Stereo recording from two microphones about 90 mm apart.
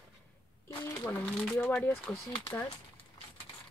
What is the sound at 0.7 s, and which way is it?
Speech, 25° left (ahead or behind).